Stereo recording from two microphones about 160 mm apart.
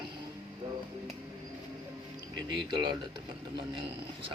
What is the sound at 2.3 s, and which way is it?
Speech, 30° right (ahead or behind).